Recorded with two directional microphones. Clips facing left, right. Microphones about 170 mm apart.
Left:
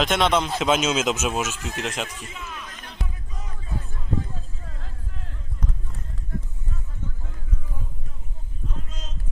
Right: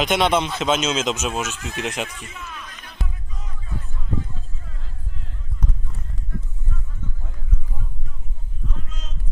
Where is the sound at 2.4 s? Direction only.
15° left (ahead or behind).